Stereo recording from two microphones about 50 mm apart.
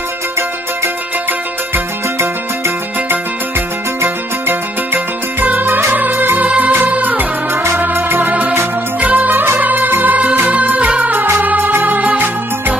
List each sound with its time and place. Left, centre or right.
2.1 s music: right